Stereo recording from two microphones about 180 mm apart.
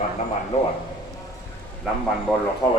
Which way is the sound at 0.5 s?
40° left (ahead or behind).